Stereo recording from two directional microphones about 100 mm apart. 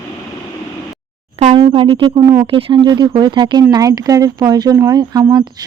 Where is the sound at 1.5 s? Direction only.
65° right (ahead or behind).